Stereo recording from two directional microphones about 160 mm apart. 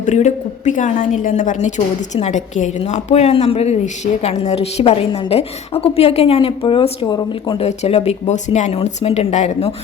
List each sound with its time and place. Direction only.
0.0 s a woman's voice: 45° left (ahead or behind); by 7.7 s 30° left (ahead or behind)
7.7 s speech: 45° left (ahead or behind)